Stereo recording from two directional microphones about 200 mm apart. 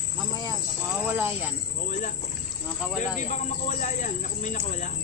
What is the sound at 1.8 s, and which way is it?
Rowboat, 40° left (ahead or behind).